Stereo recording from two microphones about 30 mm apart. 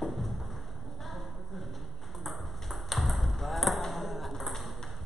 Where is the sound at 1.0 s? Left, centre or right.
Centre.